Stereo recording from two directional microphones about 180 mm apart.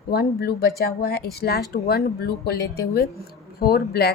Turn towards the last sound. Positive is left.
turn(degrees=60)  # may be behind; listen again after turning